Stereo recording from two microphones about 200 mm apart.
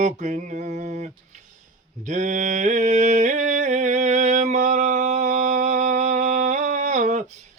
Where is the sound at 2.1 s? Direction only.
40° right (ahead or behind).